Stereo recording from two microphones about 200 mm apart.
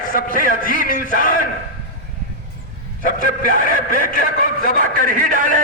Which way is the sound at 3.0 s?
45° right (ahead or behind).